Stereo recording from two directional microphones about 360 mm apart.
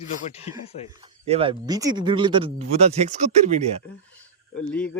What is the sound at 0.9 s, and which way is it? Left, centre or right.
Speech, centre.